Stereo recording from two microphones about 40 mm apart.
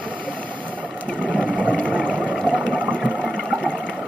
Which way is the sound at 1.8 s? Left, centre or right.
Right.